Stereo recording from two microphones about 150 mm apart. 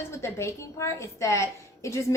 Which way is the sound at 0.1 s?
20° left (ahead or behind).